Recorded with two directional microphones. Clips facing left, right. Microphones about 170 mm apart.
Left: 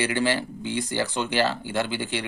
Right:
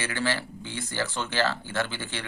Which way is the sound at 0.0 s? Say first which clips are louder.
Left 5 dB; 15° left (ahead or behind).